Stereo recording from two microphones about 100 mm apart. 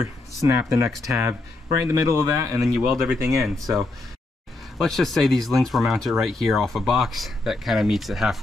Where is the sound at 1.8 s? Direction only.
30° right (ahead or behind).